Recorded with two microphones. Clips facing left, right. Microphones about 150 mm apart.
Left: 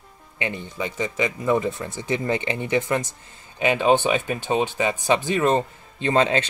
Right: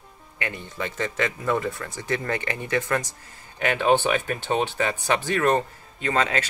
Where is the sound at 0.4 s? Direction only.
20° left (ahead or behind).